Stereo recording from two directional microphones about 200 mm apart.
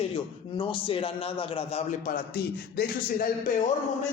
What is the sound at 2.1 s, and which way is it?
A man's voice, 50° left (ahead or behind).